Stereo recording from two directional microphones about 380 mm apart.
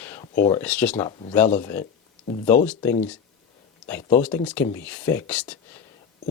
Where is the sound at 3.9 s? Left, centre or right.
Centre.